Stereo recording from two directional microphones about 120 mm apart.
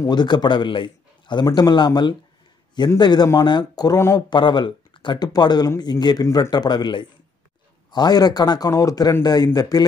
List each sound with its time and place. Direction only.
0.0 s a man's voice: 35° left (ahead or behind)
4.3 s a man's voice: 40° left (ahead or behind)
6.2 s a man's voice: 25° left (ahead or behind)
6.5 s a man's voice: 35° left (ahead or behind)